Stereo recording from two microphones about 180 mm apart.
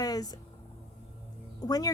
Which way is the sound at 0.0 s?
20° left (ahead or behind).